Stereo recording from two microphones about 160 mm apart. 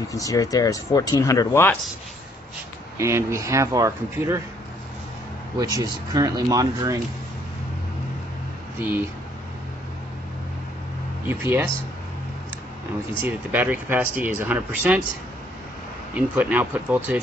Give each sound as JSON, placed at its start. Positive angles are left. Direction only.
{"t": 0.1, "sound": "speech", "side_deg": 20}
{"t": 3.0, "sound": "speech", "side_deg": -15}
{"t": 5.6, "sound": "speech", "side_deg": -20}
{"t": 8.7, "sound": "speech", "side_deg": -10}
{"t": 11.2, "sound": "speech", "side_deg": -15}
{"t": 13.2, "sound": "speech", "side_deg": -10}
{"t": 16.2, "sound": "speech", "side_deg": -10}